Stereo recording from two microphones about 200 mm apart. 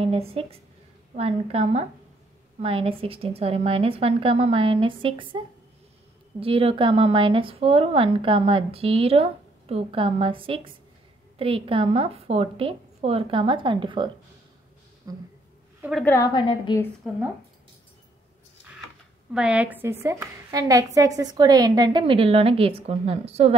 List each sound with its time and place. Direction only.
0.0 s a woman's voice: 30° right (ahead or behind)
6.4 s speech: 25° right (ahead or behind)
15.8 s a woman's voice: centre (ahead or behind)
16.1 s a woman's voice: 20° left (ahead or behind)
19.3 s speech: 5° right (ahead or behind); by 23.5 s 30° right (ahead or behind)